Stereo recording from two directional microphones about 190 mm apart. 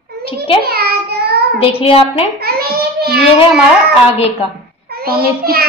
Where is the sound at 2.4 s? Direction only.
55° right (ahead or behind).